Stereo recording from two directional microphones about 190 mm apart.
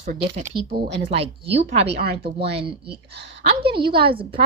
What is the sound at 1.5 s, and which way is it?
Speech, 35° right (ahead or behind).